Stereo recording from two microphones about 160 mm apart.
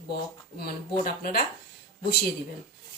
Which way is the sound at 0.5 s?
70° left (ahead or behind).